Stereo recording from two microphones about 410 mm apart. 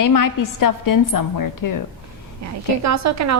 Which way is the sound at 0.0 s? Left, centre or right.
Left.